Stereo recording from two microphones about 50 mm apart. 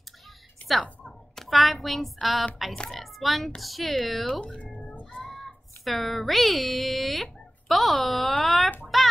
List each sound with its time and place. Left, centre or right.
0.6 s a sound: left
1.0 s speech: centre
4.3 s speech: centre
4.7 s music: left
5.2 s speech: centre
8.9 s child singing: centre